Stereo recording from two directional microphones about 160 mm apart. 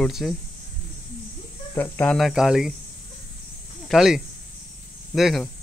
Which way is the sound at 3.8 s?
Centre (ahead or behind).